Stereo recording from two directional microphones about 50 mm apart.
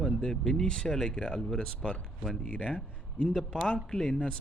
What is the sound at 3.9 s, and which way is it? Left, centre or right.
Speech, centre.